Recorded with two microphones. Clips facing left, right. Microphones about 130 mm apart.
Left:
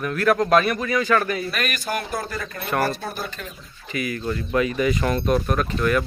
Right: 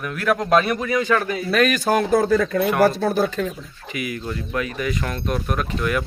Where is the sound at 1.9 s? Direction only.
90° right.